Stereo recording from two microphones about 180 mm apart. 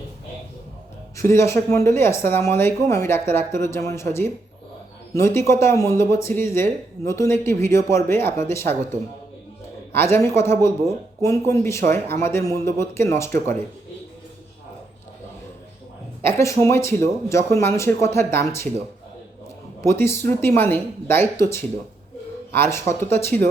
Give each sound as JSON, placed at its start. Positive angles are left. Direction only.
{"t": 1.1, "sound": "speech", "side_deg": 15}
{"t": 9.9, "sound": "speech", "side_deg": 15}
{"t": 16.2, "sound": "speech", "side_deg": 15}
{"t": 19.8, "sound": "speech", "side_deg": 15}